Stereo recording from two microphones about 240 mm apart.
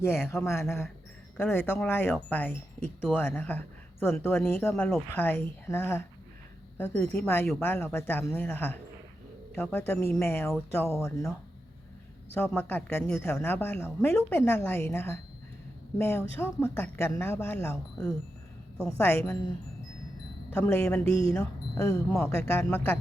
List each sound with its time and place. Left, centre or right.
0.2 s a woman's voice: centre
20.6 s a woman's voice: centre